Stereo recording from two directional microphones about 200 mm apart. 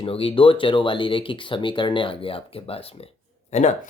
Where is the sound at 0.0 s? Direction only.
25° left (ahead or behind).